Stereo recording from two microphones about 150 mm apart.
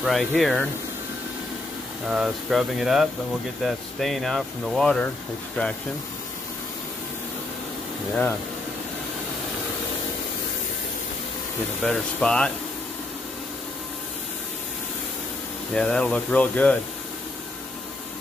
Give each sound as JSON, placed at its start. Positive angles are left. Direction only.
{"t": 0.0, "sound": "speech", "side_deg": 0}
{"t": 2.0, "sound": "speech", "side_deg": -5}
{"t": 11.8, "sound": "speech", "side_deg": 5}
{"t": 15.7, "sound": "speech", "side_deg": 5}